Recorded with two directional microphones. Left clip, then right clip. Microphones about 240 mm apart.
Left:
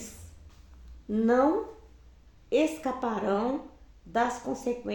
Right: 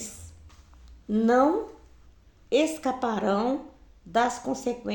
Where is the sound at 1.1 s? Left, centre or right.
Right.